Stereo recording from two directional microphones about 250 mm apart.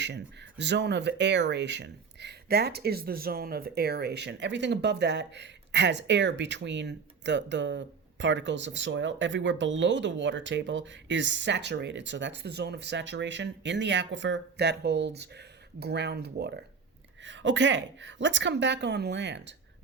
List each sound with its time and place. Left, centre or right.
0.0 s speech: right